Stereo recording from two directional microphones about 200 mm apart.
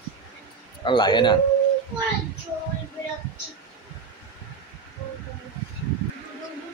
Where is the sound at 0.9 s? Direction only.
20° left (ahead or behind).